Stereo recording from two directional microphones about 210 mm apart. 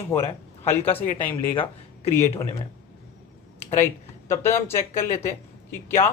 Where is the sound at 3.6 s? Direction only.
10° left (ahead or behind).